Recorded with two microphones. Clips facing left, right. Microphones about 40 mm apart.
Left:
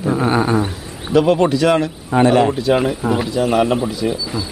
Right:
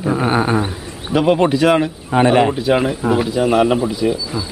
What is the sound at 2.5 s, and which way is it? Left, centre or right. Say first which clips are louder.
A man's voice: even; centre.